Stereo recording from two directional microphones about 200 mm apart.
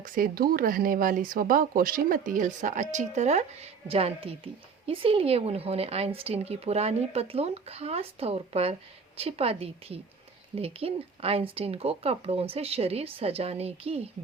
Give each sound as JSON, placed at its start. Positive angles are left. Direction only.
{"t": 0.0, "sound": "a woman's voice", "side_deg": -45}